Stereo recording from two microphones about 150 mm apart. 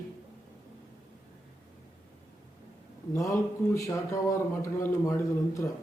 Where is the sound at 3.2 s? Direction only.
20° left (ahead or behind).